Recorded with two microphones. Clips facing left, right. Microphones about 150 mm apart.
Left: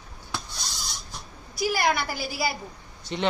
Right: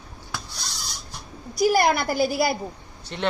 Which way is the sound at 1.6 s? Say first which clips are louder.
Right 5 dB; 40° right (ahead or behind).